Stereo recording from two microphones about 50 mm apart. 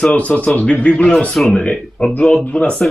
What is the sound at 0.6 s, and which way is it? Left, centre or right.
A man's voice, left.